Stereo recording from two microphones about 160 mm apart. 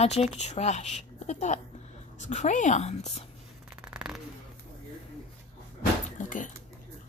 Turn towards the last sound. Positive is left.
turn(degrees=55)  # may be behind; listen again after turning